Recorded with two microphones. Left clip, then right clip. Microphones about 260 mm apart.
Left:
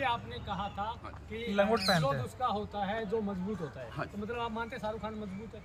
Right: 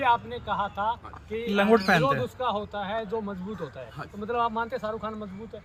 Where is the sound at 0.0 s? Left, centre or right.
Centre.